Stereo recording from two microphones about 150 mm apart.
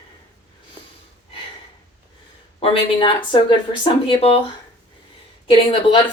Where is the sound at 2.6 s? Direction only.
35° left (ahead or behind).